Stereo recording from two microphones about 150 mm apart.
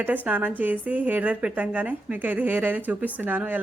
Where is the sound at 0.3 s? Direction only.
10° right (ahead or behind).